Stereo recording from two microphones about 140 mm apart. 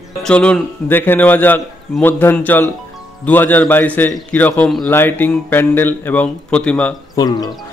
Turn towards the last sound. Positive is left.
turn(degrees=30)  # may be behind; listen again after turning